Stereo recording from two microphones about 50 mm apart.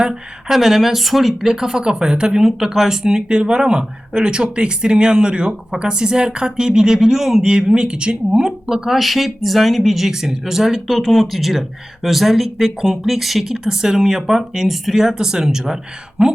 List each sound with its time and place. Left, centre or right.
0.0 s speech: centre